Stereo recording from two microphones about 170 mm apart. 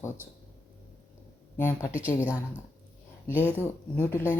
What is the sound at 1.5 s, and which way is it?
Speech, 15° left (ahead or behind).